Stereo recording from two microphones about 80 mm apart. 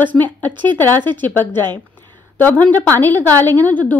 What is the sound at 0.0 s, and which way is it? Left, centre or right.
Speech, left.